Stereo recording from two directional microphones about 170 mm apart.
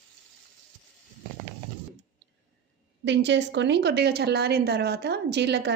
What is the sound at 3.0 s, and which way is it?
A woman's voice, 90° right.